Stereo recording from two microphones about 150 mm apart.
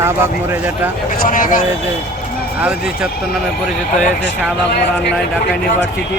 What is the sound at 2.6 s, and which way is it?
Speech, 5° right (ahead or behind).